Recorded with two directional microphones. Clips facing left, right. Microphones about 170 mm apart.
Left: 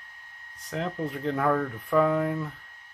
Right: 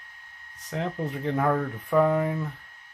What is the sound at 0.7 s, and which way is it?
Speech, centre (ahead or behind).